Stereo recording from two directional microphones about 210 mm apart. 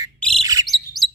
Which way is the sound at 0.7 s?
Centre (ahead or behind).